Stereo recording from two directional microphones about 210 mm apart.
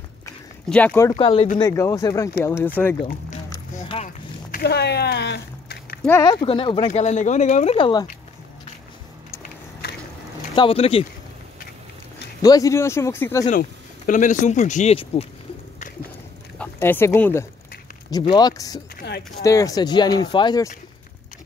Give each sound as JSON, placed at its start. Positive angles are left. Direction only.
{"t": 0.7, "sound": "speech", "side_deg": 5}
{"t": 1.1, "sound": "speech", "side_deg": 25}
{"t": 1.6, "sound": "speech", "side_deg": 15}
{"t": 3.0, "sound": "a sound", "side_deg": 40}
{"t": 6.0, "sound": "speech", "side_deg": 15}
{"t": 6.4, "sound": "speech", "side_deg": 25}
{"t": 9.4, "sound": "a sound", "side_deg": 50}
{"t": 10.5, "sound": "speech", "side_deg": 25}
{"t": 12.4, "sound": "speech", "side_deg": 15}
{"t": 13.5, "sound": "speech", "side_deg": 40}
{"t": 16.5, "sound": "speech", "side_deg": 10}
{"t": 18.9, "sound": "a sound", "side_deg": 50}
{"t": 19.4, "sound": "speech", "side_deg": 15}